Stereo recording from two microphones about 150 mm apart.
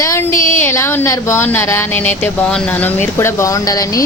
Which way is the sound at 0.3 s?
60° left (ahead or behind).